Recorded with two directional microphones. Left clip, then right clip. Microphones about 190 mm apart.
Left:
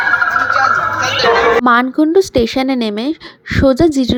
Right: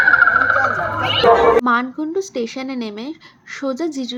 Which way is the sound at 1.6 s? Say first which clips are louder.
Left 7 dB; 45° left (ahead or behind).